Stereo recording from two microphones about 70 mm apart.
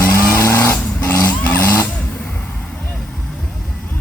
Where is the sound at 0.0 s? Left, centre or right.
Left.